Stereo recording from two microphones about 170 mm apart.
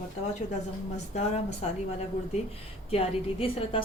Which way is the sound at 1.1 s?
40° left (ahead or behind).